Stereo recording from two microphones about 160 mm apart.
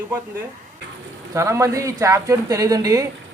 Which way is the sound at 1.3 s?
20° right (ahead or behind).